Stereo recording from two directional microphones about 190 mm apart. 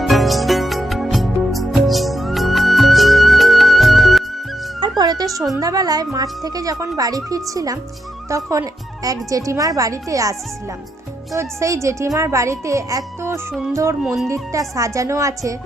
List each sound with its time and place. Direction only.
0.0 s music: centre (ahead or behind)
4.8 s cat: 20° right (ahead or behind)
5.5 s a child's voice: 20° right (ahead or behind)
11.3 s a child's voice: 15° right (ahead or behind)
14.0 s speech: 5° right (ahead or behind)
14.8 s a child's voice: 15° right (ahead or behind)